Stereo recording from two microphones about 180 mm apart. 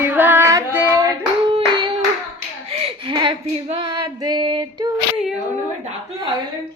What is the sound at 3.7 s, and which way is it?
Female singing, 25° right (ahead or behind).